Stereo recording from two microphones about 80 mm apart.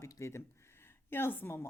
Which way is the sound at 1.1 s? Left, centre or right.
Left.